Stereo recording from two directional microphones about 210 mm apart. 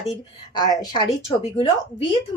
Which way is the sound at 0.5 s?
20° left (ahead or behind).